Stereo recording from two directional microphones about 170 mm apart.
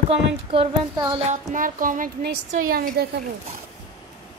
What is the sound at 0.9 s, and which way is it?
Speech, 20° right (ahead or behind).